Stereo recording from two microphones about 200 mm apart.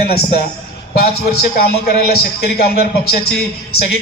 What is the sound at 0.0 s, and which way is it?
A man's voice, 50° left (ahead or behind).